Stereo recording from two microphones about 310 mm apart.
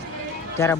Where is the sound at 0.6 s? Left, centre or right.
Centre.